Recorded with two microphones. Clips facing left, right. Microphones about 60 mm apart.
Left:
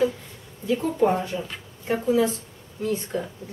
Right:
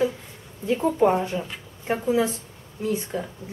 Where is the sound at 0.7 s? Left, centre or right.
Right.